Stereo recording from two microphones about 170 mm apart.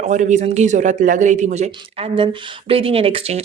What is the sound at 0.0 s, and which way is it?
A man's voice, 45° right (ahead or behind).